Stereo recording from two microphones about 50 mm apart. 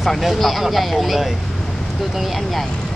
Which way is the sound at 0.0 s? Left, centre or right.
Centre.